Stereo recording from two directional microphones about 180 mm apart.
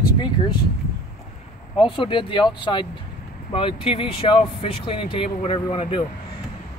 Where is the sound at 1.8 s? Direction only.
30° left (ahead or behind).